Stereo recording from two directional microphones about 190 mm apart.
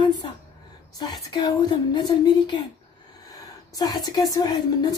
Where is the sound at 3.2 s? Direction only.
20° left (ahead or behind).